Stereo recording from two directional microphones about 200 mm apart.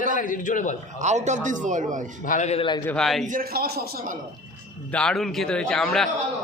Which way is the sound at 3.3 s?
45° right (ahead or behind).